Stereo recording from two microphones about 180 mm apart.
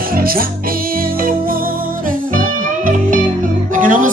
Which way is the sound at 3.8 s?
45° right (ahead or behind).